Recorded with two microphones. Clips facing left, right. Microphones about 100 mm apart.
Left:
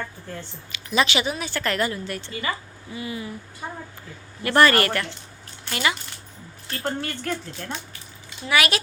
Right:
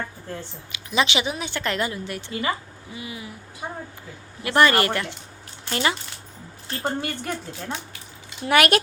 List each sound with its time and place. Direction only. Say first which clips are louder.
0.7 s speech: left 1 dB; 20° right (ahead or behind)
5.6 s speech: right 1 dB; 30° right (ahead or behind)
6.8 s speech: right 1 dB; 10° right (ahead or behind)
8.4 s a child's voice: right 4 dB; 50° right (ahead or behind)